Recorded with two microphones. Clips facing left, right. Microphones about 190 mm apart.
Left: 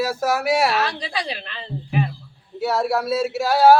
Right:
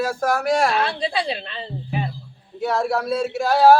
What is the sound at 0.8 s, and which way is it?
Speech, 30° right (ahead or behind).